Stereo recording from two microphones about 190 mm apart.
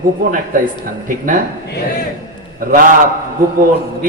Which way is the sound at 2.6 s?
45° right (ahead or behind).